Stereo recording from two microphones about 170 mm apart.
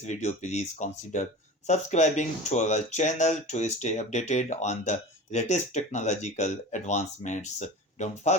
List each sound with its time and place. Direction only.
0.0 s speech: 45° left (ahead or behind)